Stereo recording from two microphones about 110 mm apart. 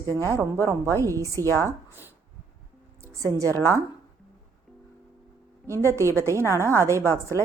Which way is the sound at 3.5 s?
20° left (ahead or behind).